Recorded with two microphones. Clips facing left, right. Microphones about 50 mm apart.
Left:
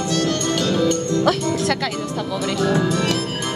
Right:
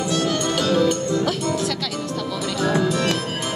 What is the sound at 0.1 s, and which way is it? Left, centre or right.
Music, centre.